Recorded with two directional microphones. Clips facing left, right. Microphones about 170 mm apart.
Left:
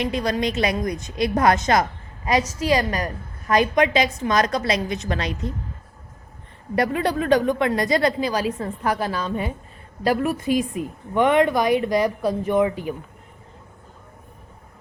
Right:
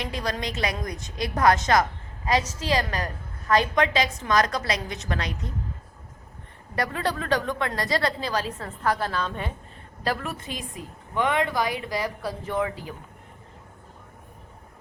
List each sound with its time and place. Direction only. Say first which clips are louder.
0.0 s a woman's voice: left 7 dB; 20° left (ahead or behind)
6.7 s a woman's voice: left 6 dB; 20° left (ahead or behind)